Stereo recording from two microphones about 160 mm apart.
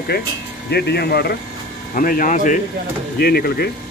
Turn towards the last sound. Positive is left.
turn(degrees=85)